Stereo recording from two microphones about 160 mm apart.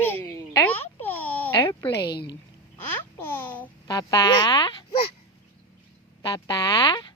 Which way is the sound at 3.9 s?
25° left (ahead or behind).